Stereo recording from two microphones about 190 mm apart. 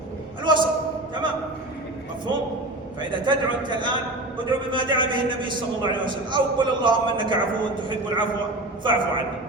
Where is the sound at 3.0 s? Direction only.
25° right (ahead or behind).